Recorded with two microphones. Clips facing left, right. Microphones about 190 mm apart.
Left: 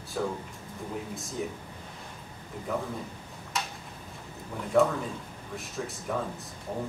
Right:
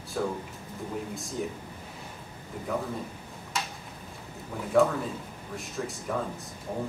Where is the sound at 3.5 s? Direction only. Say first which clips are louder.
Even; centre (ahead or behind).